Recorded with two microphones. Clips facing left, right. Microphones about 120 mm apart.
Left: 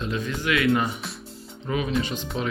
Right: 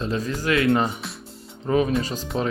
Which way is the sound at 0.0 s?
35° right (ahead or behind).